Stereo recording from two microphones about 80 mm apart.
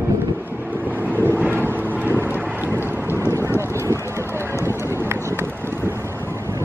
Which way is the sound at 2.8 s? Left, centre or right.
Left.